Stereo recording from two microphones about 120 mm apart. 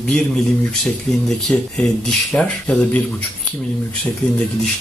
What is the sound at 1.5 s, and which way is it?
Speech, 10° left (ahead or behind).